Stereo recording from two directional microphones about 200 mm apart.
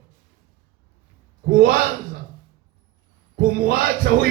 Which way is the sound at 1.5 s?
45° right (ahead or behind).